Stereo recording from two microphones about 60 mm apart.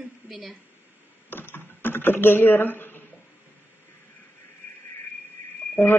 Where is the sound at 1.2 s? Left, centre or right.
Left.